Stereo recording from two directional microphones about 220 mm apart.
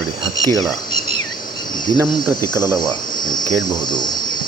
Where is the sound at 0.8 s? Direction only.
20° left (ahead or behind).